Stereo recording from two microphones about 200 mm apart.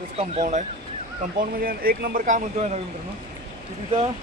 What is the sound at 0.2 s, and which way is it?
Speech, 35° right (ahead or behind).